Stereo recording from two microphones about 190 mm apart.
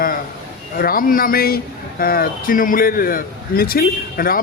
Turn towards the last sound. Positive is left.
turn(degrees=50)  # may be behind; listen again after turning